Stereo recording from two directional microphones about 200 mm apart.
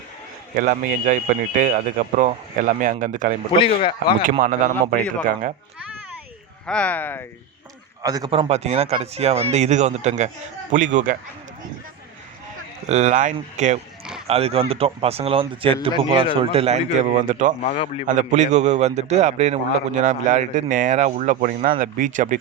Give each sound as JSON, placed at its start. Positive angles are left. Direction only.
{"t": 0.5, "sound": "a man's voice", "side_deg": -40}
{"t": 3.5, "sound": "speech", "side_deg": 25}
{"t": 4.2, "sound": "a man's voice", "side_deg": -45}
{"t": 6.7, "sound": "speech", "side_deg": 5}
{"t": 8.0, "sound": "a man's voice", "side_deg": -20}
{"t": 12.9, "sound": "a man's voice", "side_deg": -35}
{"t": 17.6, "sound": "speech", "side_deg": 30}
{"t": 18.1, "sound": "a man's voice", "side_deg": -40}